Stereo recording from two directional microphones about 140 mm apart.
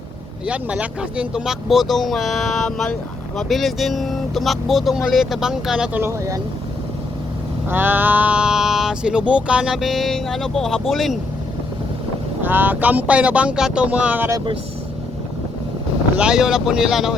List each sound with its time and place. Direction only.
0.4 s speech: 10° right (ahead or behind)
6.0 s speech: 20° right (ahead or behind)
7.7 s speech: 15° right (ahead or behind)
12.4 s speech: 15° right (ahead or behind)
14.3 s speech: 35° right (ahead or behind)
16.1 s speech: 5° right (ahead or behind)